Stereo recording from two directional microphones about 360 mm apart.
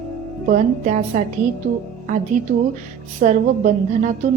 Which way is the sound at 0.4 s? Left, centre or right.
Right.